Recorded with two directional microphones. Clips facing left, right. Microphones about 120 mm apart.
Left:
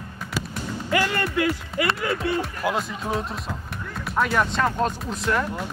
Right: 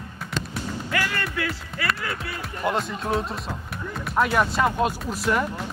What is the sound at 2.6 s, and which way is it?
Speech, centre (ahead or behind).